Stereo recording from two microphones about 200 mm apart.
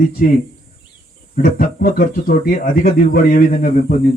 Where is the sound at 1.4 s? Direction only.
45° left (ahead or behind).